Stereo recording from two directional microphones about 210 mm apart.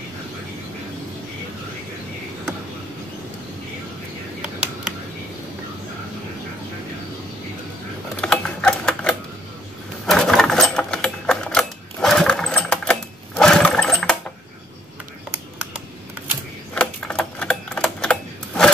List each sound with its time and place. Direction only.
8.2 s typewriter: 5° left (ahead or behind)
10.0 s sewing machine: centre (ahead or behind)
13.4 s toilet flush: 5° left (ahead or behind)
16.7 s typewriter: 5° left (ahead or behind)